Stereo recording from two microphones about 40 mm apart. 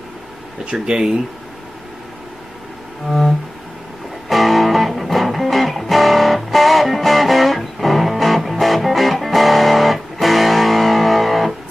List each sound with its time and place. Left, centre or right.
0.8 s speech: right
3.1 s music: centre